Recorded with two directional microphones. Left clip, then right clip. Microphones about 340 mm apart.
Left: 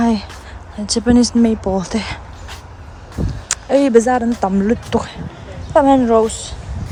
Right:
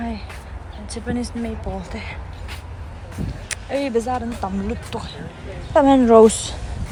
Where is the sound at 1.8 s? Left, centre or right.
Centre.